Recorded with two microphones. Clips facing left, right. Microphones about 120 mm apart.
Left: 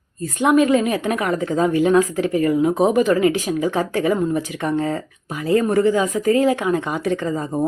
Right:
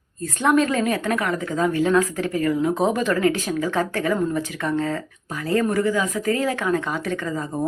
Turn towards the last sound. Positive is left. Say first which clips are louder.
# left 4 dB
turn(degrees=25)  # may be behind; listen again after turning